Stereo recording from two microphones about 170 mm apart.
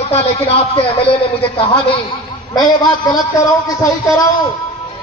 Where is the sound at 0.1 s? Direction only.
35° left (ahead or behind).